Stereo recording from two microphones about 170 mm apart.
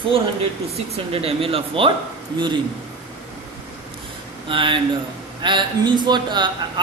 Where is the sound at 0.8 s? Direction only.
35° right (ahead or behind).